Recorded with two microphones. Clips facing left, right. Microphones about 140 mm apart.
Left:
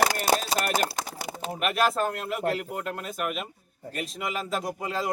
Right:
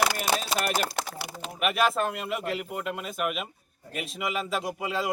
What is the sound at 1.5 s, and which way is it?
Speech, centre (ahead or behind).